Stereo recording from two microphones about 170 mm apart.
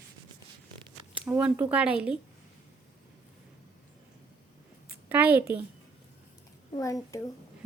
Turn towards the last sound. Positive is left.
turn(degrees=20)  # may be behind; listen again after turning